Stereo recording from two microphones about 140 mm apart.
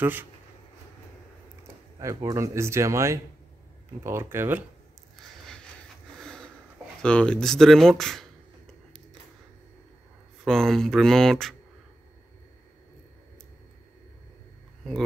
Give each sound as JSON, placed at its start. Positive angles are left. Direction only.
{"t": 0.0, "sound": "speech", "side_deg": -15}
{"t": 2.0, "sound": "a man's voice", "side_deg": -20}
{"t": 5.1, "sound": "a sound", "side_deg": 5}
{"t": 7.0, "sound": "speech", "side_deg": 5}
{"t": 10.4, "sound": "speech", "side_deg": 0}